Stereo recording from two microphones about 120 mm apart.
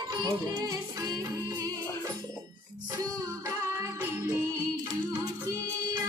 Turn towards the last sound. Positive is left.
turn(degrees=-20)  # may be behind; listen again after turning